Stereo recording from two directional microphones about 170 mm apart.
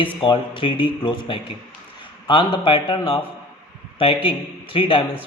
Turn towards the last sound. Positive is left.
turn(degrees=30)  # may be behind; listen again after turning